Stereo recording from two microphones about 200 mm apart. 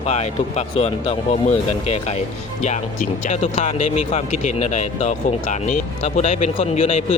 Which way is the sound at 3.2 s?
35° left (ahead or behind).